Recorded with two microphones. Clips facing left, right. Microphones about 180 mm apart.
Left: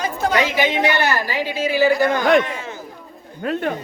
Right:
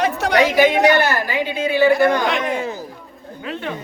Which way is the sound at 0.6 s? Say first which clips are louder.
Right 5 dB; 45° right (ahead or behind).